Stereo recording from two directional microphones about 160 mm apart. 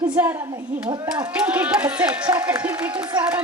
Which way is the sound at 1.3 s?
10° right (ahead or behind).